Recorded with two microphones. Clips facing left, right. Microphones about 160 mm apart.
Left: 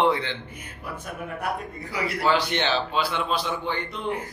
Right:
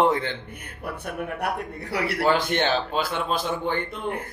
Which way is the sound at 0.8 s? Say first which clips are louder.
Right 4 dB; 65° right (ahead or behind).